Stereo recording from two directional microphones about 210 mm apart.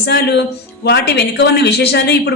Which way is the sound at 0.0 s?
50° left (ahead or behind).